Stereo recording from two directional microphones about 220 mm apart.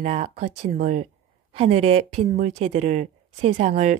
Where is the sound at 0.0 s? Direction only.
30° right (ahead or behind).